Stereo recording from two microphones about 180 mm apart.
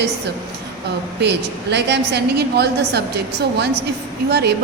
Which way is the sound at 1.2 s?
70° right (ahead or behind).